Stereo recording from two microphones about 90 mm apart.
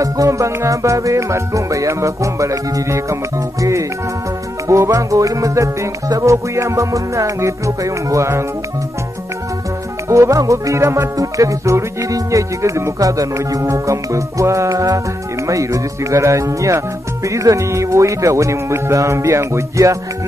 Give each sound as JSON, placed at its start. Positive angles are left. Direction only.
{"t": 0.0, "sound": "music", "side_deg": -35}
{"t": 4.6, "sound": "music", "side_deg": -35}
{"t": 10.0, "sound": "music", "side_deg": -35}